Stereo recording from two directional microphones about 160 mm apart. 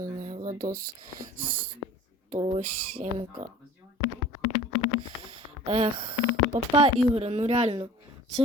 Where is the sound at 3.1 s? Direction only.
35° right (ahead or behind).